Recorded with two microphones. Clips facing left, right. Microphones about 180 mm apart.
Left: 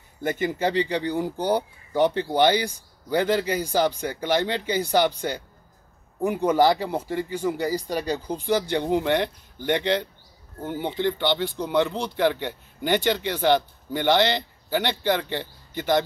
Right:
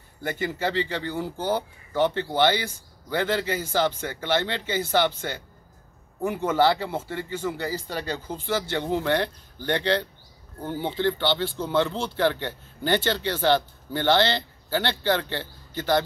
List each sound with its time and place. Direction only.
0.2 s speech: 15° left (ahead or behind)